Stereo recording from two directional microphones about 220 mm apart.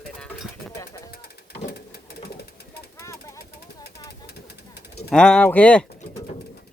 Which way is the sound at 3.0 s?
15° left (ahead or behind).